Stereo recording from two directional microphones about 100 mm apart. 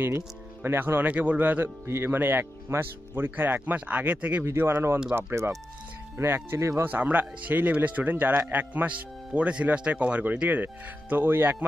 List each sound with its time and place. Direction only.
0.0 s speech: 25° right (ahead or behind)